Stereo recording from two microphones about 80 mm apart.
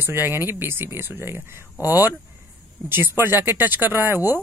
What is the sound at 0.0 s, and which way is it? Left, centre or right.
Speech, right.